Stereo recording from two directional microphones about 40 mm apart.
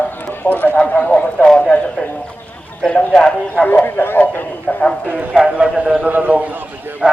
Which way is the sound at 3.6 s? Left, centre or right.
Left.